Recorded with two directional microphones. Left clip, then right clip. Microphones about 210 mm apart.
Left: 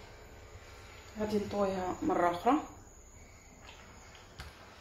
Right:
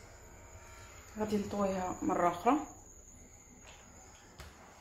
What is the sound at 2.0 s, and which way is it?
Speech, 25° right (ahead or behind).